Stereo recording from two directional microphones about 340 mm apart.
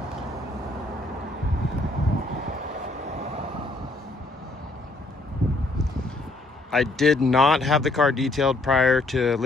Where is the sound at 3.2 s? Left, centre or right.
Centre.